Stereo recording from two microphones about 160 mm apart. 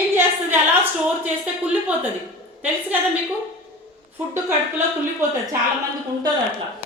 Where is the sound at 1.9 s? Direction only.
10° right (ahead or behind).